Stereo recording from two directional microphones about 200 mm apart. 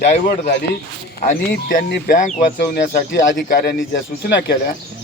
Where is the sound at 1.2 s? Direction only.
45° left (ahead or behind).